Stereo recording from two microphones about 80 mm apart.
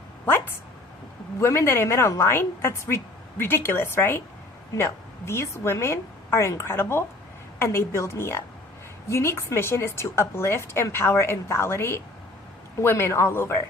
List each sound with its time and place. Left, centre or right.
0.3 s a woman's voice: left